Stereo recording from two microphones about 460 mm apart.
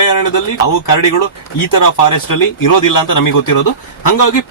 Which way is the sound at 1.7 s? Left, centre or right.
Left.